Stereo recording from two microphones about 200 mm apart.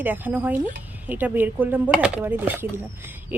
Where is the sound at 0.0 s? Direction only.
10° right (ahead or behind).